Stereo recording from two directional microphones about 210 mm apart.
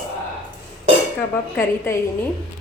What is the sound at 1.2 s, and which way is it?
Speech, 10° left (ahead or behind).